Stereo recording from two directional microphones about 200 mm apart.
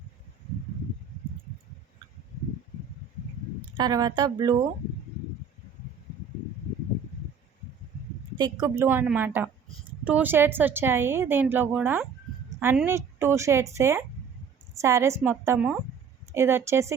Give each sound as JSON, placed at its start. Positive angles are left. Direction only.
{"t": 3.8, "sound": "speech", "side_deg": -20}
{"t": 8.4, "sound": "a woman's voice", "side_deg": -20}